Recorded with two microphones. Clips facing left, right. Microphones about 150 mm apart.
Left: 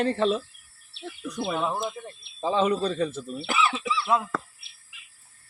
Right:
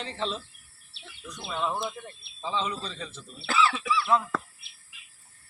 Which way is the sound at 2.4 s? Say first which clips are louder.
Left 8 dB; 55° left (ahead or behind).